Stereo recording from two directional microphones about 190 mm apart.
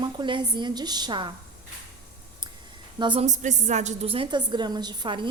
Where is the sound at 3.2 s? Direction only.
40° right (ahead or behind).